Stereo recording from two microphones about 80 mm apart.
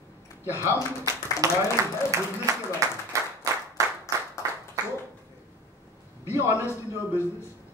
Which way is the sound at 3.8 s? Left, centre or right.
Right.